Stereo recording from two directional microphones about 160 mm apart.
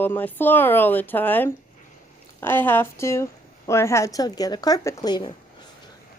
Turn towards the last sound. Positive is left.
turn(degrees=25)  # may be behind; listen again after turning